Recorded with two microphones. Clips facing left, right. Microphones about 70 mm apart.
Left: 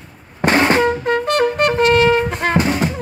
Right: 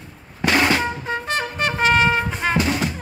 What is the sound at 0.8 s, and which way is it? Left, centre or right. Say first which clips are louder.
Trumpet: left 9 dB; left.